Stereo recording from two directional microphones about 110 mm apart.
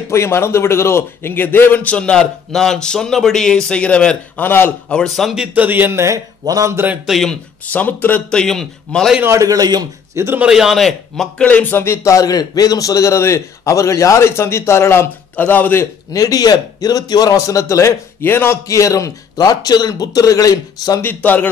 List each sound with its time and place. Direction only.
0.1 s a man's voice: 25° left (ahead or behind)
4.9 s a man's voice: centre (ahead or behind); by 6.8 s 30° right (ahead or behind)
7.1 s speech: centre (ahead or behind)
7.7 s a man's voice: 15° left (ahead or behind)
9.2 s a man's voice: 30° right (ahead or behind)
10.1 s speech: 25° right (ahead or behind)
10.4 s a man's voice: 5° right (ahead or behind); by 15.9 s 20° left (ahead or behind)
16.1 s a man's voice: 35° left (ahead or behind)
21.0 s a man's voice: 15° left (ahead or behind)